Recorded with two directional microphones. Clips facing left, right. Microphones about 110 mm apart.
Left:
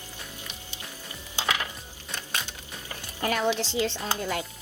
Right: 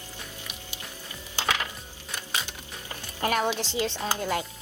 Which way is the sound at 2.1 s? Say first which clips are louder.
Right 1 dB; 5° right (ahead or behind).